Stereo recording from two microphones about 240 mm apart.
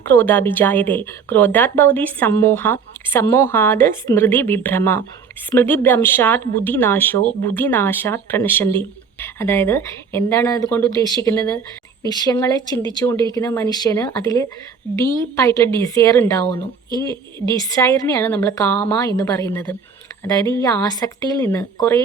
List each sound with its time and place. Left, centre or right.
0.0 s speech: centre
17.1 s a woman's voice: centre
17.7 s speech: centre